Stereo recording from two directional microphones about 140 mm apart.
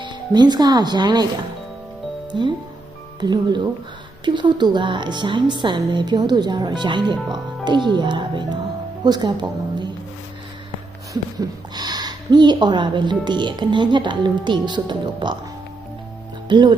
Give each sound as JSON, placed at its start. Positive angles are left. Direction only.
{"t": 0.0, "sound": "speech", "side_deg": -30}
{"t": 2.3, "sound": "speech", "side_deg": -35}
{"t": 11.1, "sound": "speech", "side_deg": -30}
{"t": 16.5, "sound": "speech", "side_deg": -35}